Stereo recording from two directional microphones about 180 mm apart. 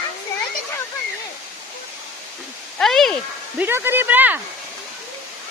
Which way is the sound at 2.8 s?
Centre (ahead or behind).